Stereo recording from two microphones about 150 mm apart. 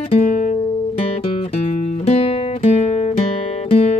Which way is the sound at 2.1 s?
45° left (ahead or behind).